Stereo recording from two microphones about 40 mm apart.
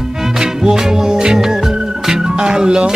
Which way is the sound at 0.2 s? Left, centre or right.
Centre.